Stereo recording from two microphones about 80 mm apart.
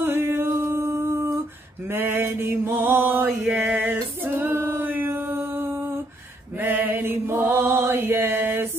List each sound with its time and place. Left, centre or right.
0.0 s a sound: right
1.9 s mantra: right
3.3 s female singing: centre
6.6 s chant: right